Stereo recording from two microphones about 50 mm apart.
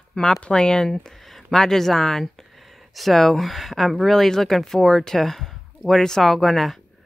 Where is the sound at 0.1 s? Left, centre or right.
Centre.